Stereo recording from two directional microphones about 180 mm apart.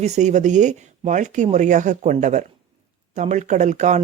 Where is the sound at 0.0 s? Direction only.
40° right (ahead or behind).